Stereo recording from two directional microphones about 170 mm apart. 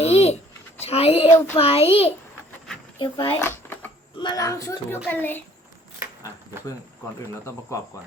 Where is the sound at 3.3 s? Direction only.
15° left (ahead or behind).